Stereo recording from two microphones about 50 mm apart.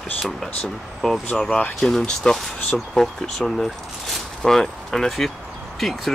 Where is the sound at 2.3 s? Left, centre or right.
Centre.